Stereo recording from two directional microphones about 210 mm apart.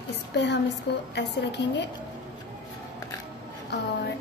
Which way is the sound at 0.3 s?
55° left (ahead or behind).